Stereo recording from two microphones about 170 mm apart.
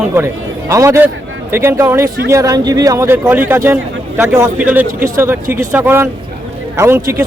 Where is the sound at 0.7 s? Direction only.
15° right (ahead or behind).